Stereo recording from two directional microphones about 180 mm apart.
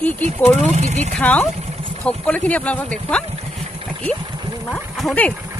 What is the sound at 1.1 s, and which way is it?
Speech, 5° left (ahead or behind).